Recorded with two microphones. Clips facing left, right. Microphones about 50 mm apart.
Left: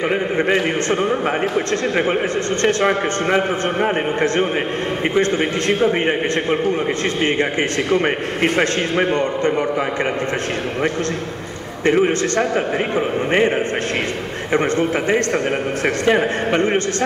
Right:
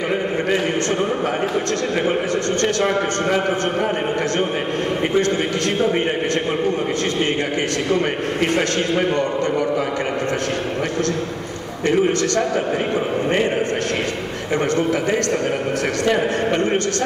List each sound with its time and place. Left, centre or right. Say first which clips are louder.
1.5 s a man's voice: left 1 dB; left
7.9 s a man's voice: left 1 dB; left
11.8 s a man's voice: left 2 dB; left
14.5 s a man's voice: left 1 dB; left